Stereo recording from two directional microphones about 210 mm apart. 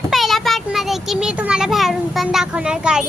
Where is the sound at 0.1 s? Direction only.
Centre (ahead or behind).